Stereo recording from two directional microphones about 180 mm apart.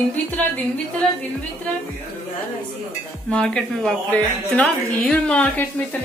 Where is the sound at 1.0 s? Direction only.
Centre (ahead or behind).